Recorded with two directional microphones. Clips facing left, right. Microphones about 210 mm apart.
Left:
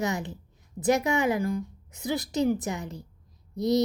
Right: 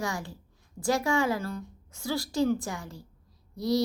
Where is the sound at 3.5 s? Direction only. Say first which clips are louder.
Left 3 dB; 20° left (ahead or behind).